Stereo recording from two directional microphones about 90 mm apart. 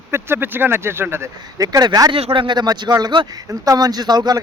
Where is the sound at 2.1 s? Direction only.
70° right (ahead or behind).